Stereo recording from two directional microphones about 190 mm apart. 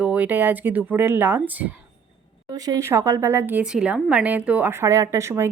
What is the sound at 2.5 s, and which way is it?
Speech, 20° right (ahead or behind).